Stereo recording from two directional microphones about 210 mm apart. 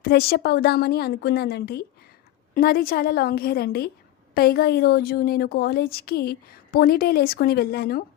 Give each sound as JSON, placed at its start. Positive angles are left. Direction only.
{"t": 0.0, "sound": "a woman's voice", "side_deg": 45}